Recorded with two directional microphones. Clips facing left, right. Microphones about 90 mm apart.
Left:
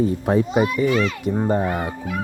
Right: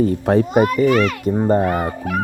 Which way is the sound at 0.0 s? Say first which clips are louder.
Right 3 dB; 65° right (ahead or behind).